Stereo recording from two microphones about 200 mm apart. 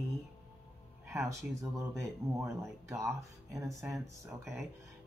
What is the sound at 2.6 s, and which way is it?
Speech, 15° right (ahead or behind).